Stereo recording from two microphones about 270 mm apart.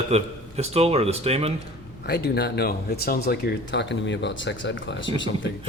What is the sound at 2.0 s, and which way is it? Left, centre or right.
Speech, left.